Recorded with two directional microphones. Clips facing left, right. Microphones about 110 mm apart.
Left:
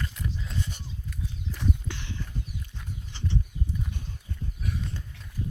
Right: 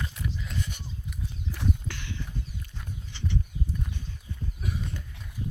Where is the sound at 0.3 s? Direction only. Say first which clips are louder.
Even; 25° left (ahead or behind).